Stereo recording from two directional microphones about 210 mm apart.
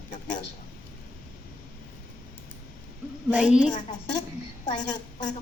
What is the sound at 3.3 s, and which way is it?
Speech, 5° right (ahead or behind).